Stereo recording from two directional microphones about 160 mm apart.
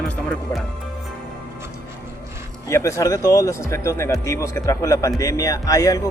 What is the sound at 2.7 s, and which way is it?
Speech, 20° left (ahead or behind).